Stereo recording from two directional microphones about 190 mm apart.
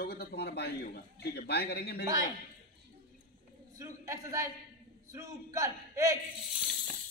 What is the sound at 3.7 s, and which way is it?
A man's voice, 15° right (ahead or behind).